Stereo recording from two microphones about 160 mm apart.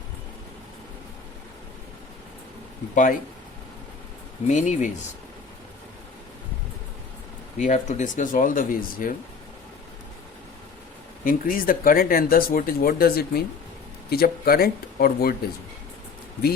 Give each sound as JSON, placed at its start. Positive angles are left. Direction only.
{"t": 2.9, "sound": "speech", "side_deg": 55}
{"t": 4.4, "sound": "speech", "side_deg": 50}
{"t": 7.6, "sound": "speech", "side_deg": 50}
{"t": 11.2, "sound": "speech", "side_deg": 60}